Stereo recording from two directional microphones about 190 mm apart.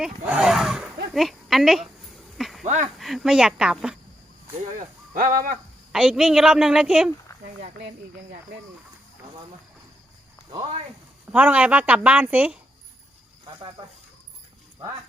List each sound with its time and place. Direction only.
0.0 s speech: 5° right (ahead or behind)
2.4 s a sound: centre (ahead or behind)
2.6 s speech: 35° right (ahead or behind)
3.0 s a woman's voice: centre (ahead or behind)
4.8 s speech: 45° right (ahead or behind)
5.9 s a woman's voice: 5° right (ahead or behind)
10.5 s speech: 25° right (ahead or behind)
11.3 s a woman's voice: 5° right (ahead or behind)